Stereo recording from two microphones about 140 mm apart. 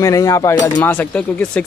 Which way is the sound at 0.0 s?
25° left (ahead or behind).